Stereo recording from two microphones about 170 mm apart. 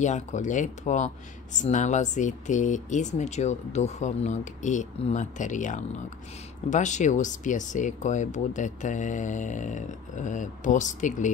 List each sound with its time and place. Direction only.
0.0 s speech: 45° left (ahead or behind)